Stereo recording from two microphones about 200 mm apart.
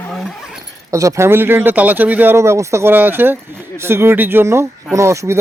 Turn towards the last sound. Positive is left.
turn(degrees=-15)  # may be behind; listen again after turning